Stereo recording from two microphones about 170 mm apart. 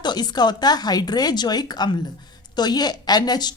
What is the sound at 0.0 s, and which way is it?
A woman's voice, 25° left (ahead or behind).